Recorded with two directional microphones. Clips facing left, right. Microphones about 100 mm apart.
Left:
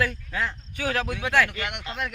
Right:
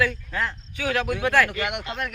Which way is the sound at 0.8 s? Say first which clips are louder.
Right 2 dB; 35° left (ahead or behind).